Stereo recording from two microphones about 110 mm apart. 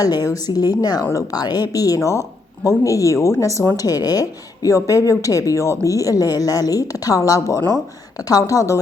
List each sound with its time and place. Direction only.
0.0 s a woman's voice: 35° left (ahead or behind)
3.8 s a woman's voice: 35° left (ahead or behind)